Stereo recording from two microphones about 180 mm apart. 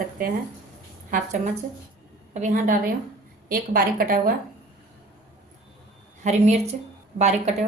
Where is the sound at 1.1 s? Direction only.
50° right (ahead or behind).